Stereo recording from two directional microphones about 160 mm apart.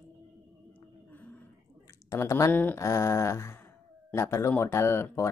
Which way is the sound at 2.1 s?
15° left (ahead or behind).